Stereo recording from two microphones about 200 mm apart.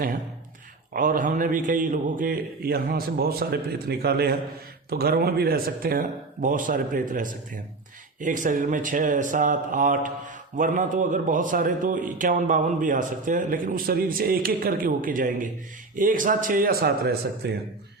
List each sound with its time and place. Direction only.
0.9 s a man's voice: 40° right (ahead or behind)